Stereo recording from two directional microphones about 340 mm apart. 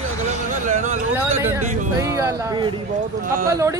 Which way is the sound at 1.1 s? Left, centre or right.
Centre.